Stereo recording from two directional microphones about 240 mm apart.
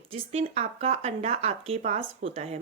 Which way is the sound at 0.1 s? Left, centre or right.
Right.